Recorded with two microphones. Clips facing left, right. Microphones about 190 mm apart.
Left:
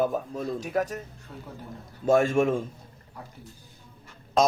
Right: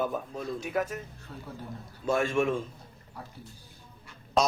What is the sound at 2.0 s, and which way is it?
Speech, 45° left (ahead or behind).